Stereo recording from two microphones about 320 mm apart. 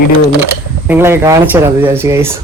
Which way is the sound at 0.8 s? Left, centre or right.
Centre.